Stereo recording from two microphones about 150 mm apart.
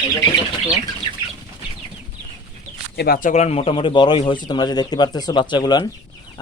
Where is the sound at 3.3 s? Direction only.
45° left (ahead or behind); by 5.8 s 30° left (ahead or behind).